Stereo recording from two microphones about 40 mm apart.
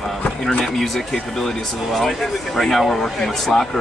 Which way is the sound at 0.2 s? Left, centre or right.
Left.